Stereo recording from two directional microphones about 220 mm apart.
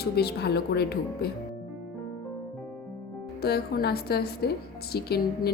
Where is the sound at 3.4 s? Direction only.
45° left (ahead or behind).